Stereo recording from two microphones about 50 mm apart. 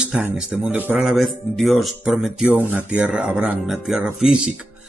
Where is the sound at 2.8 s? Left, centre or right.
Right.